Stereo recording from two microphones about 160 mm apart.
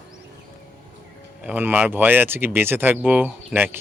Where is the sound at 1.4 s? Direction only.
10° right (ahead or behind).